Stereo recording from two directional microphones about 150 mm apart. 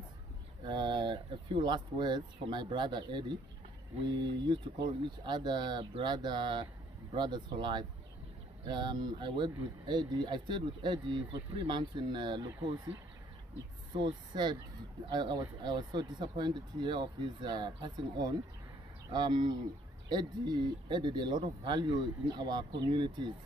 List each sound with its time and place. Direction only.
0.7 s speech: 30° right (ahead or behind)
13.9 s speech: 30° right (ahead or behind)